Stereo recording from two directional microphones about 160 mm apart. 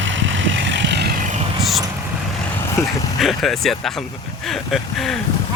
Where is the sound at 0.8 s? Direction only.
90° right.